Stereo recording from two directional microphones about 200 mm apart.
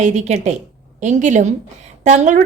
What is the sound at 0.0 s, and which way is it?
A woman's voice, 35° right (ahead or behind).